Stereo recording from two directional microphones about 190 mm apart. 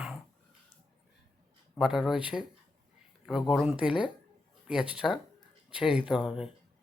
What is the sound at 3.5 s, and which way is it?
Speech, 5° right (ahead or behind).